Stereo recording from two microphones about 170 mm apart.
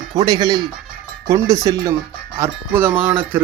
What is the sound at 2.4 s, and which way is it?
Cowbell, 10° right (ahead or behind).